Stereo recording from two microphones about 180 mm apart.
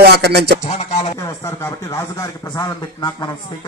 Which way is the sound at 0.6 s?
40° left (ahead or behind).